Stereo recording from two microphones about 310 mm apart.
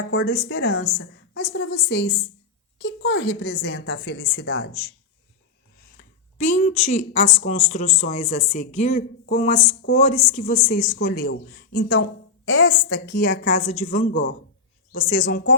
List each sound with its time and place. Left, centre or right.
0.1 s a woman's voice: left
6.0 s a woman's voice: left